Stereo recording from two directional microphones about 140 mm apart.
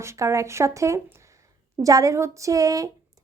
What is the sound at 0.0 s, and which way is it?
A woman's voice, 20° right (ahead or behind).